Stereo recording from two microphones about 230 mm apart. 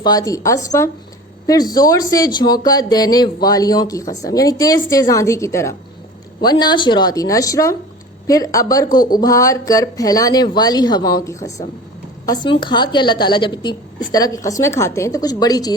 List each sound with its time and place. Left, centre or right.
0.0 s speech: centre
8.9 s speech: left
9.1 s a woman's voice: centre